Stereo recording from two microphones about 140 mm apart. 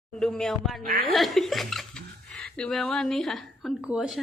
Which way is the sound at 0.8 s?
90° right.